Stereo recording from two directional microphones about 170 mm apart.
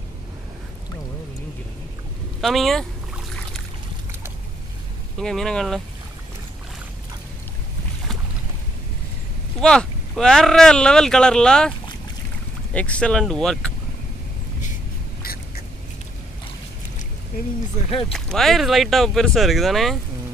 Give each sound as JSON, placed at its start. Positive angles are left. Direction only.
{"t": 2.4, "sound": "speech", "side_deg": 0}
{"t": 5.1, "sound": "speech", "side_deg": 5}
{"t": 9.6, "sound": "speech", "side_deg": 5}
{"t": 12.7, "sound": "speech", "side_deg": 5}
{"t": 17.7, "sound": "speech", "side_deg": 35}
{"t": 18.1, "sound": "speech", "side_deg": 0}